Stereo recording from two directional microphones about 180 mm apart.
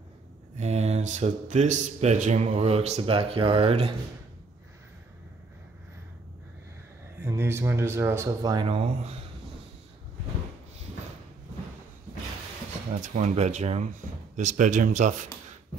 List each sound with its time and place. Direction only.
0.6 s speech: 35° right (ahead or behind)
7.2 s speech: 15° right (ahead or behind); by 9.1 s 30° right (ahead or behind)
13.0 s speech: 40° right (ahead or behind)